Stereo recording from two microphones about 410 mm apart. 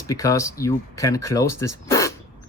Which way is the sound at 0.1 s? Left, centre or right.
Centre.